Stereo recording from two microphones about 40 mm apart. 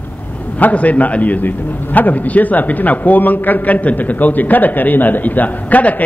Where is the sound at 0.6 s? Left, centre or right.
Left.